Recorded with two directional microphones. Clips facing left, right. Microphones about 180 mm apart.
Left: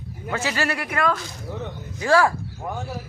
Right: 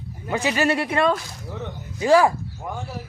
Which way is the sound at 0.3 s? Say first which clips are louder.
Right 4 dB; 15° right (ahead or behind).